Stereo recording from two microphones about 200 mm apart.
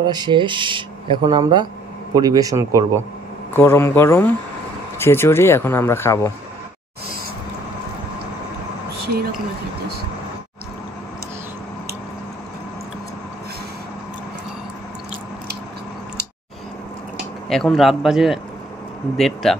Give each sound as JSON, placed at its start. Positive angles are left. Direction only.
{"t": 0.0, "sound": "a man's voice", "side_deg": -20}
{"t": 3.5, "sound": "speech", "side_deg": 10}
{"t": 17.5, "sound": "a man's voice", "side_deg": 0}